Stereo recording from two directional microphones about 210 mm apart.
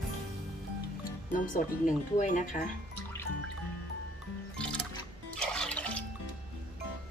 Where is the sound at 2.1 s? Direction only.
35° left (ahead or behind).